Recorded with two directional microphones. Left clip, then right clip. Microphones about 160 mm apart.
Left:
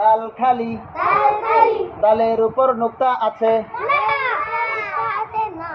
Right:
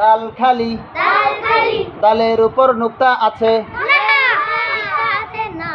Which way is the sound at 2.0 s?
25° right (ahead or behind).